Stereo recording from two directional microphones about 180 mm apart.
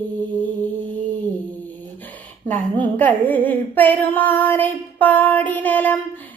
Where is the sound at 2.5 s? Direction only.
10° left (ahead or behind).